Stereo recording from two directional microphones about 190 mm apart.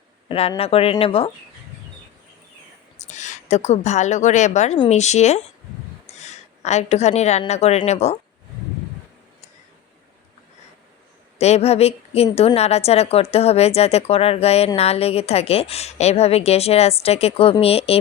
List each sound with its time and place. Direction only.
0.3 s speech: 30° left (ahead or behind)
3.1 s a woman's voice: 40° left (ahead or behind)
11.3 s a woman's voice: 35° left (ahead or behind)